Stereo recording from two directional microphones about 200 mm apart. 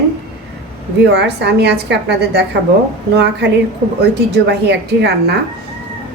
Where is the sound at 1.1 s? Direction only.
55° right (ahead or behind).